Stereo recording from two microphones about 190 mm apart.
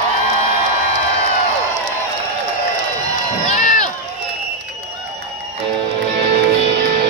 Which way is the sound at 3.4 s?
40° left (ahead or behind).